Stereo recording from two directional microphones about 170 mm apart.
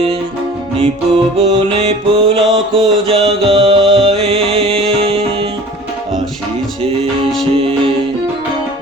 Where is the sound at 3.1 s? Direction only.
30° right (ahead or behind).